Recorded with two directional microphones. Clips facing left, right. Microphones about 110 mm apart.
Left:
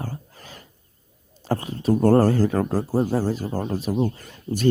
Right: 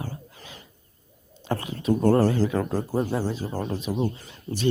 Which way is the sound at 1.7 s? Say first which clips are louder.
Left 3 dB; 40° left (ahead or behind).